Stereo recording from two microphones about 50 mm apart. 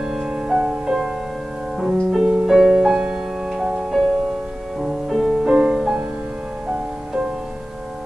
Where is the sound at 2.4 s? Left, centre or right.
Centre.